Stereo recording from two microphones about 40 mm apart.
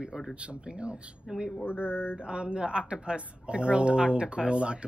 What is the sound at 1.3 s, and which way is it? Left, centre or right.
Speech, centre.